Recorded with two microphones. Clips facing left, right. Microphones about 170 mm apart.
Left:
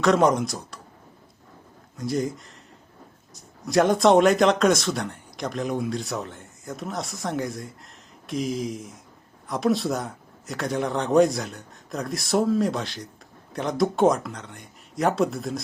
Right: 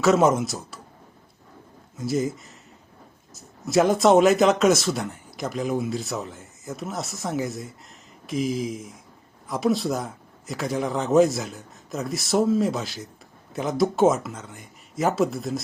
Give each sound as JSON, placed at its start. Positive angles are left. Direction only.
{"t": 0.0, "sound": "speech", "side_deg": -5}
{"t": 2.0, "sound": "speech", "side_deg": -5}